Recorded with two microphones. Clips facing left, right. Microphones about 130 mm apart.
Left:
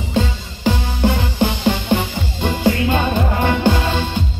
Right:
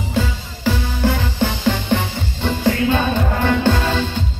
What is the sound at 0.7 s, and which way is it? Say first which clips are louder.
Music: left 1 dB; 20° left (ahead or behind).